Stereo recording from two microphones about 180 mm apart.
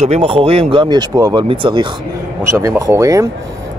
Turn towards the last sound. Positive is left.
turn(degrees=-15)  # may be behind; listen again after turning